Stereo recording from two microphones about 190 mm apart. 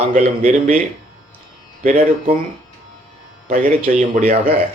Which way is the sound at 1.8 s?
45° right (ahead or behind).